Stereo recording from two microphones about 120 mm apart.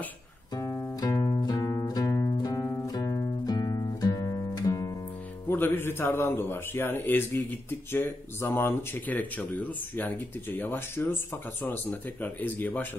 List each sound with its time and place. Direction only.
0.6 s music: 30° left (ahead or behind)
5.5 s speech: 15° left (ahead or behind)